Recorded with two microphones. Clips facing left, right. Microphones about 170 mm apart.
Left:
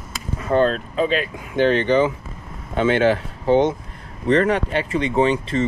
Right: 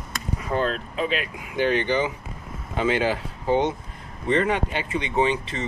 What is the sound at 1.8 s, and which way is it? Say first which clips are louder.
Speech: left 6 dB; 30° left (ahead or behind).